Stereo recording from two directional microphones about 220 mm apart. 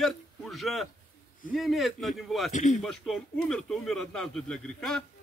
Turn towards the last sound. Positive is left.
turn(degrees=5)  # may be behind; listen again after turning